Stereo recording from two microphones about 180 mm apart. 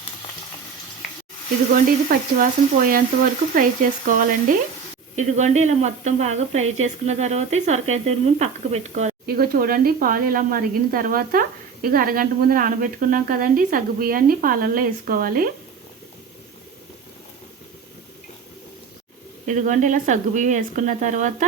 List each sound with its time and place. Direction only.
1.7 s a woman's voice: 50° right (ahead or behind)
9.2 s speech: 55° right (ahead or behind)
19.5 s speech: 45° right (ahead or behind)